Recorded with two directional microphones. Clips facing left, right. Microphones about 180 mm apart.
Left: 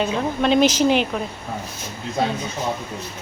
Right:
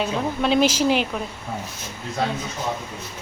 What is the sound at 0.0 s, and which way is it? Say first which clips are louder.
A woman's voice: left 2 dB; 5° right (ahead or behind).